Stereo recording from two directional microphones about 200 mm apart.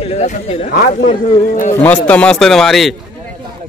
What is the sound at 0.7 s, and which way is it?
Speech, 45° left (ahead or behind).